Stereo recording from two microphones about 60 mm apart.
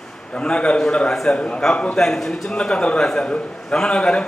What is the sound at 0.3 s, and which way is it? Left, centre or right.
A man's voice, centre.